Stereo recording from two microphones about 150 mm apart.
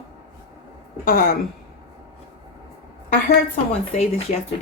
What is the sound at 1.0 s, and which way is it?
Speech, 75° left (ahead or behind).